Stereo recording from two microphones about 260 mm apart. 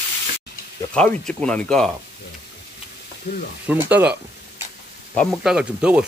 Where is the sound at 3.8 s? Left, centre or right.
Centre.